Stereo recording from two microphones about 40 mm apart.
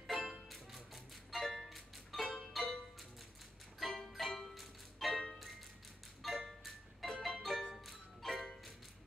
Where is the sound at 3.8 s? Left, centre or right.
Centre.